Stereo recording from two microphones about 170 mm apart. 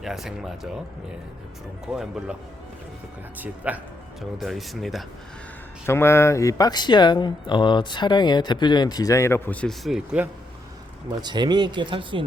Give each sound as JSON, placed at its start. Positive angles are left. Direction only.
{"t": 0.0, "sound": "speech", "side_deg": -5}
{"t": 1.9, "sound": "speech", "side_deg": -5}
{"t": 3.3, "sound": "speech", "side_deg": -10}
{"t": 5.8, "sound": "speech", "side_deg": 15}
{"t": 11.2, "sound": "speech", "side_deg": -25}